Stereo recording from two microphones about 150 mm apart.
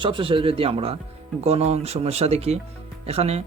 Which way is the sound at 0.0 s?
35° right (ahead or behind).